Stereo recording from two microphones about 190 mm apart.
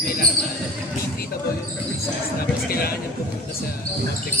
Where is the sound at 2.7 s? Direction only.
50° left (ahead or behind).